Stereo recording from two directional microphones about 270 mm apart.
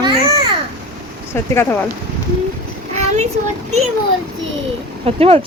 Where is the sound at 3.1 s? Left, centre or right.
Right.